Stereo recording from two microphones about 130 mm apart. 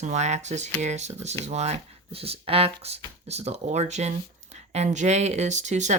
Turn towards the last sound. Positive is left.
turn(degrees=-65)  # may be behind; listen again after turning